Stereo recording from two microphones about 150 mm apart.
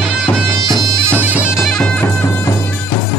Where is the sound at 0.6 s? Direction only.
25° right (ahead or behind).